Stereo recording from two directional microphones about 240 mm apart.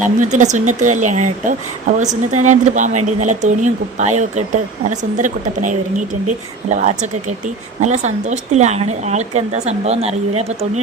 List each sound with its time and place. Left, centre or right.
0.0 s a woman's voice: right